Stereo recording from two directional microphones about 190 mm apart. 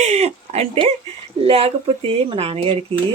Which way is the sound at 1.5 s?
30° right (ahead or behind).